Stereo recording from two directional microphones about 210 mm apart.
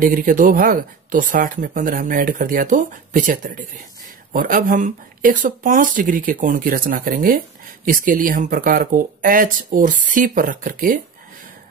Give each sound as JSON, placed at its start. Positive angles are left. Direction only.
{"t": 0.0, "sound": "speech", "side_deg": -40}